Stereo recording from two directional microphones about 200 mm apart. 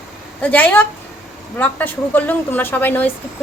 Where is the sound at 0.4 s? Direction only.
10° left (ahead or behind).